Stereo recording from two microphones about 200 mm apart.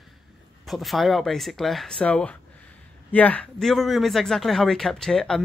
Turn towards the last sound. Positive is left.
turn(degrees=0)  # may be behind; listen again after turning